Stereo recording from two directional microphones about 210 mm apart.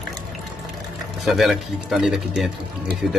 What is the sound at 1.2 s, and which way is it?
Speech, centre (ahead or behind).